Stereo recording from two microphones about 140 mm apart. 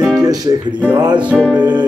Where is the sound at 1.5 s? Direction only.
30° right (ahead or behind).